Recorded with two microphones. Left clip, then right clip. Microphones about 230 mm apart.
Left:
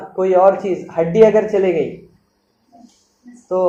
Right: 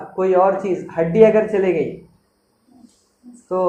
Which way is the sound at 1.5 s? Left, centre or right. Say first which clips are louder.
Left 2 dB; centre.